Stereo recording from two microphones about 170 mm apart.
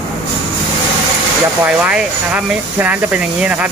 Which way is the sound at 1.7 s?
5° right (ahead or behind).